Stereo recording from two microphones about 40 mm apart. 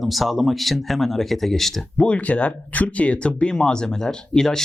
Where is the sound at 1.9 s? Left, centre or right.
Left.